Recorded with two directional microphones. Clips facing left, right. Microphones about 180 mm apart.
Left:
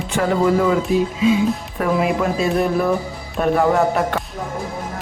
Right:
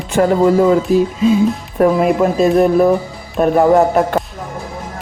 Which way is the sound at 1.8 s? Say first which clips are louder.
Right 8 dB; 45° right (ahead or behind).